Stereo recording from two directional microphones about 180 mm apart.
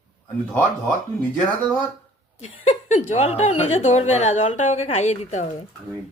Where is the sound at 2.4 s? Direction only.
40° left (ahead or behind).